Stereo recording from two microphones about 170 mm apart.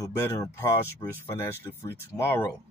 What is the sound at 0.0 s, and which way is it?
Speech, 15° left (ahead or behind).